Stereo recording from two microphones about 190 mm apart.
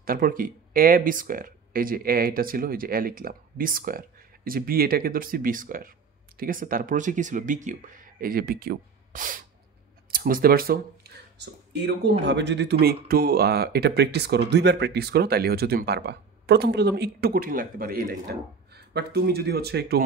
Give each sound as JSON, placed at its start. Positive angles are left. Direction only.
{"t": 0.0, "sound": "speech", "side_deg": -50}
{"t": 12.8, "sound": "speech", "side_deg": -55}